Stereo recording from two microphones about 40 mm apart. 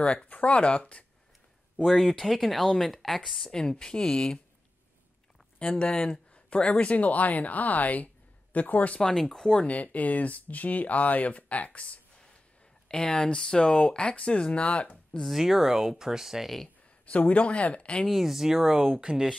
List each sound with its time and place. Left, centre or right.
0.0 s speech: left
1.9 s speech: centre
3.5 s speech: centre
5.6 s speech: left
9.0 s speech: centre
9.7 s speech: left
12.8 s speech: left
15.2 s speech: centre
17.0 s speech: left
18.1 s speech: centre